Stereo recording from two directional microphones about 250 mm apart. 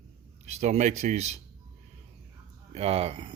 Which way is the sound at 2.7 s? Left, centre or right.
Right.